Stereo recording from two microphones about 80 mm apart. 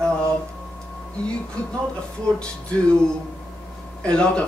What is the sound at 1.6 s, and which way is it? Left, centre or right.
Speech, centre.